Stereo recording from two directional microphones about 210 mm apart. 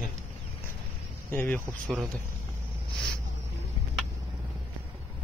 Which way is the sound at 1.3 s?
10° left (ahead or behind).